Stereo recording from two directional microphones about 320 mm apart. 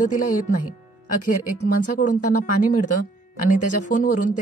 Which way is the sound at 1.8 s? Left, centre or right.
Left.